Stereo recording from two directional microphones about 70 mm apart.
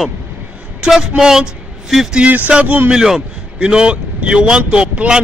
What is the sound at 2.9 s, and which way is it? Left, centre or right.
A man's voice, centre.